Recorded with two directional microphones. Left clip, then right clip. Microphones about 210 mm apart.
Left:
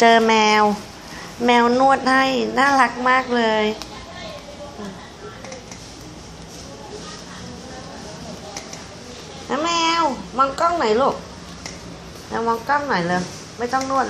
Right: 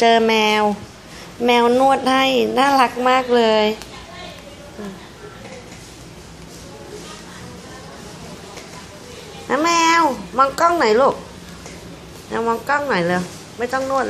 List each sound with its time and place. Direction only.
0.0 s a woman's voice: centre (ahead or behind)
9.5 s a woman's voice: 20° right (ahead or behind)
12.3 s a woman's voice: 20° right (ahead or behind)